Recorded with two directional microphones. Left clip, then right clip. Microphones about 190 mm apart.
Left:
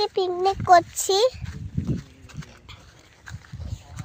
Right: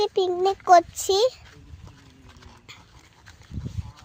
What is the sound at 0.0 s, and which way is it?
A child's voice, 15° right (ahead or behind).